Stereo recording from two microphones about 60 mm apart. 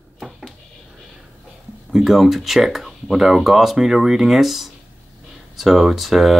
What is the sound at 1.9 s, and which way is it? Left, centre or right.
Speech, centre.